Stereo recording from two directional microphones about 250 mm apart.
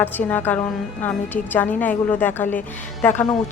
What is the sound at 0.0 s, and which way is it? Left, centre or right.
A woman's voice, centre.